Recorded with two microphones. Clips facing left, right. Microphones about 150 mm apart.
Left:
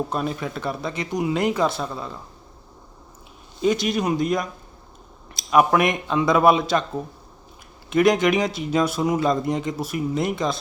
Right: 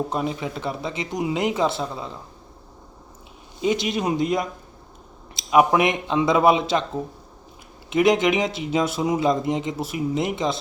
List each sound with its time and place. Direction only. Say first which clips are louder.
0.1 s speech: even; 20° right (ahead or behind)
3.6 s speech: left 1 dB; 20° right (ahead or behind)
7.9 s speech: left 1 dB; 20° right (ahead or behind)